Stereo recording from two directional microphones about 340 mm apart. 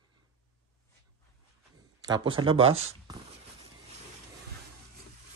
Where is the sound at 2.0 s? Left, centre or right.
Centre.